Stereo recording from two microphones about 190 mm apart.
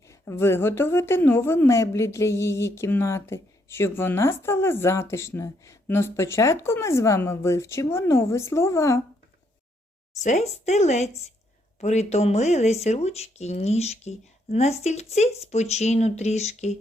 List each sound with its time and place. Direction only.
0.1 s a woman's voice: 15° left (ahead or behind)
10.2 s speech: 35° left (ahead or behind)